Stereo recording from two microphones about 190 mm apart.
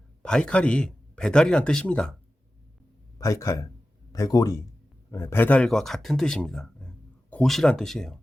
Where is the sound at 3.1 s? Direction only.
15° left (ahead or behind).